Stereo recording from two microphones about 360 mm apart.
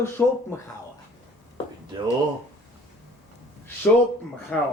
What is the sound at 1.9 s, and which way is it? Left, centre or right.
Speech, centre.